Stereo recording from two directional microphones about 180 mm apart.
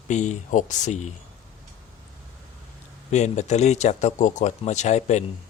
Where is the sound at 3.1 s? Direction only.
40° left (ahead or behind).